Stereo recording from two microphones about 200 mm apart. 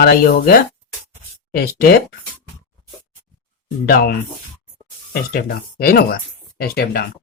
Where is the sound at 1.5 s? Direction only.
50° left (ahead or behind).